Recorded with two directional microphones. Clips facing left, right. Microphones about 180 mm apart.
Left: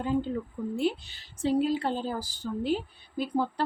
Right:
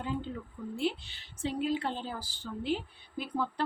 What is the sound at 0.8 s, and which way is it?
A woman's voice, 40° left (ahead or behind).